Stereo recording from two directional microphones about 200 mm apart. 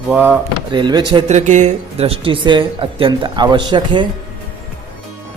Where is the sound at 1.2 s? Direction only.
35° right (ahead or behind).